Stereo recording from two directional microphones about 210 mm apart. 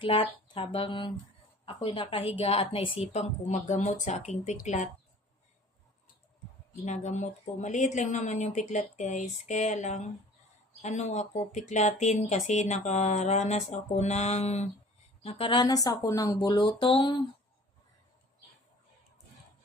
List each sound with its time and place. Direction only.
0.0 s speech: 25° left (ahead or behind)
6.8 s speech: 35° left (ahead or behind)